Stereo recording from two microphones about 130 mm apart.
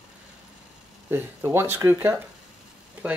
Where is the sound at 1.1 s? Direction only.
20° right (ahead or behind).